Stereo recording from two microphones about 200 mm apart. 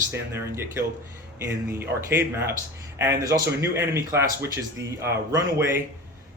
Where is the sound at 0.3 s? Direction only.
10° right (ahead or behind).